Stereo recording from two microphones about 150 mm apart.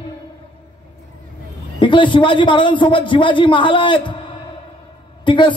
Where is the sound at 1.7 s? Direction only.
35° left (ahead or behind).